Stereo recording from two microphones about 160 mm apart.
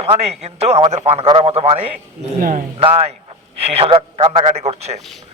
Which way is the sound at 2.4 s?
60° right (ahead or behind).